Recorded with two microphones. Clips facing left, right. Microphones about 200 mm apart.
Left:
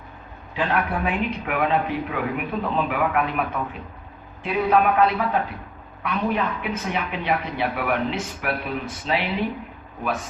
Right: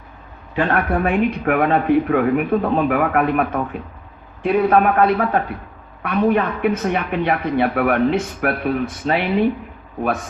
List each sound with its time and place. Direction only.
0.5 s a man's voice: 50° right (ahead or behind)